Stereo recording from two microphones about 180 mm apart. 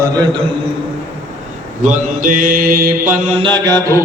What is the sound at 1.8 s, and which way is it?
Mantra, 45° right (ahead or behind).